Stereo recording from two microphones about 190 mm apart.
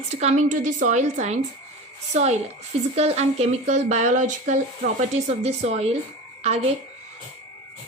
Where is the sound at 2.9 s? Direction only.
35° right (ahead or behind).